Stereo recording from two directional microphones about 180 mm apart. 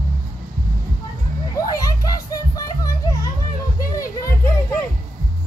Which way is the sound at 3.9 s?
15° left (ahead or behind).